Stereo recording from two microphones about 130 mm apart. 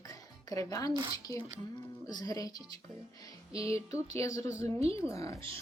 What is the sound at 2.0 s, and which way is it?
Speech, 30° left (ahead or behind).